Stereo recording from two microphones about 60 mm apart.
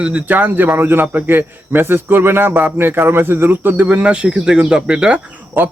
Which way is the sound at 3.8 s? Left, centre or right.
Centre.